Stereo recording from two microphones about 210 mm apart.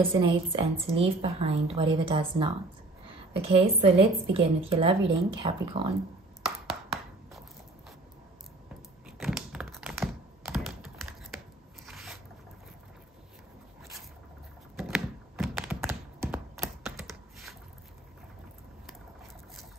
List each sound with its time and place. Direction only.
0.1 s a woman's voice: 25° right (ahead or behind)
6.4 s chopping: centre (ahead or behind)
9.2 s computer keyboard: centre (ahead or behind)
14.8 s computer keyboard: centre (ahead or behind)